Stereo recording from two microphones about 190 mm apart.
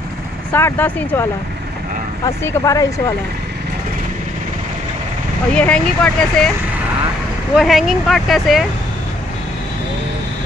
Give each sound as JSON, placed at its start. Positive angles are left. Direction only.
{"t": 0.5, "sound": "speech", "side_deg": 10}
{"t": 2.2, "sound": "speech", "side_deg": 15}
{"t": 5.5, "sound": "speech", "side_deg": 5}
{"t": 7.5, "sound": "speech", "side_deg": 0}